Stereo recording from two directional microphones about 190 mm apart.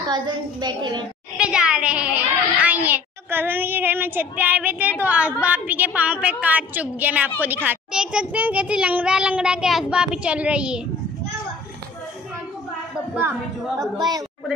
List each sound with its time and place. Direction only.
0.0 s a woman's voice: 25° right (ahead or behind)
1.4 s a woman's voice: 5° right (ahead or behind)
13.7 s a woman's voice: 20° right (ahead or behind)